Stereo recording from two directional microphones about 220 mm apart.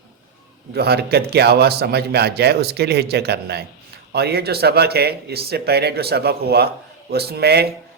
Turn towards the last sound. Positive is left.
turn(degrees=-45)  # may be behind; listen again after turning